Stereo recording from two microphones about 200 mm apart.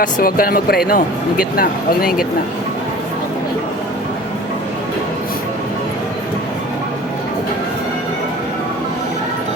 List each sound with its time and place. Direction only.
0.0 s speech: 45° left (ahead or behind)